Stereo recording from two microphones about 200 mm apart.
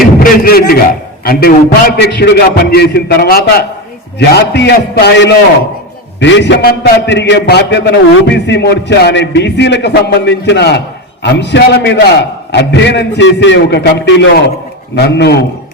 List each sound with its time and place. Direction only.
0.2 s a man's voice: 50° left (ahead or behind)